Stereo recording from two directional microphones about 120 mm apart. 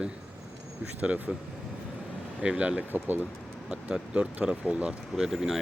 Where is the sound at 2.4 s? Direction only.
10° right (ahead or behind).